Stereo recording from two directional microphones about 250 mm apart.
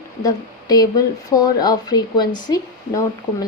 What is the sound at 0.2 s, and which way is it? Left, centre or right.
Speech, centre.